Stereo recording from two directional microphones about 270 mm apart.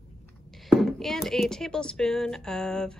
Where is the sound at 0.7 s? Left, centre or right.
Centre.